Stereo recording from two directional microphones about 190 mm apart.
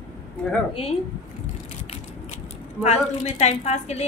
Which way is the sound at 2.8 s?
35° left (ahead or behind).